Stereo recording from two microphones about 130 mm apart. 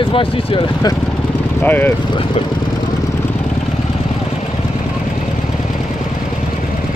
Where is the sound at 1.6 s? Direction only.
15° left (ahead or behind).